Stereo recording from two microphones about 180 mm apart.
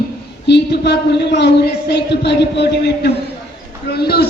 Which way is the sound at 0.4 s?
70° left (ahead or behind).